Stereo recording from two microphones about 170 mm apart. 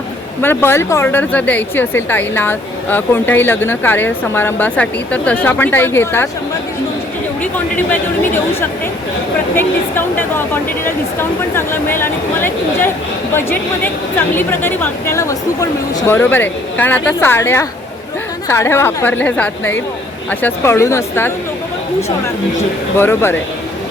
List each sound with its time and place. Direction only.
0.4 s speech: 15° left (ahead or behind)
7.5 s speech: 10° left (ahead or behind)
9.6 s speech: 10° left (ahead or behind)
23.0 s speech: 15° left (ahead or behind)